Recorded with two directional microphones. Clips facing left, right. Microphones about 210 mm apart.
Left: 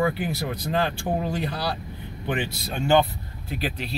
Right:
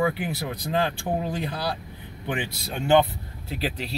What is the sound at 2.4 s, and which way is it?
Speech, 20° right (ahead or behind).